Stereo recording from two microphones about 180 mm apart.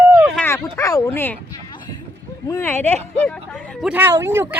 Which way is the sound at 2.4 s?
15° left (ahead or behind).